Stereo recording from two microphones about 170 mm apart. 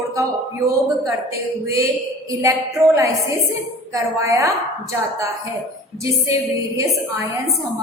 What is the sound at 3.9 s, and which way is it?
Speech, 15° right (ahead or behind).